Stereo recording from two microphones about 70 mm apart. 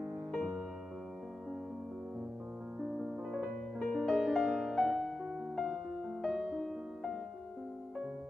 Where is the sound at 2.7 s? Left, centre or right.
Centre.